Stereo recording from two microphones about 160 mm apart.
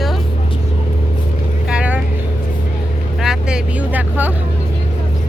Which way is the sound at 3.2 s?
5° right (ahead or behind).